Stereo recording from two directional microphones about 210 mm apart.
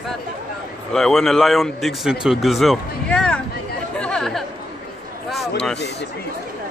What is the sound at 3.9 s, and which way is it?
Chatter, 5° left (ahead or behind).